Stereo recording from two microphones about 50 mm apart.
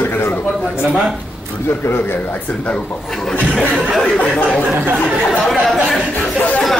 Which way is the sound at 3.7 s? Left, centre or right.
Centre.